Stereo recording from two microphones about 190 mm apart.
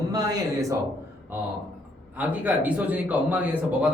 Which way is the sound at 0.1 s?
20° right (ahead or behind).